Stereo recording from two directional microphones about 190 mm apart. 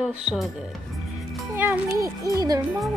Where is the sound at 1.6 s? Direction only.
10° right (ahead or behind).